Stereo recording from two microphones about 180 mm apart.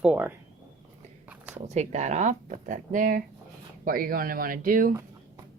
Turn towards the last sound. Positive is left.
turn(degrees=-50)  # may be behind; listen again after turning